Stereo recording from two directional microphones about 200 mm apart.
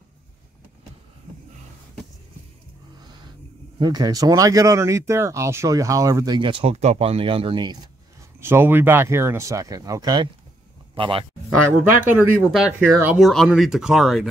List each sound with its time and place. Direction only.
3.8 s speech: 20° right (ahead or behind)
8.4 s speech: 10° right (ahead or behind)
12.0 s speech: 10° right (ahead or behind)